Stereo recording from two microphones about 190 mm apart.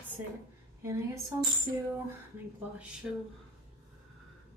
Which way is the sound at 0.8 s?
15° right (ahead or behind).